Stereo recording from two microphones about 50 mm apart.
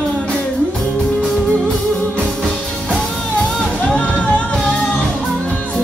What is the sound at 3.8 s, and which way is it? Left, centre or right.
Music, left.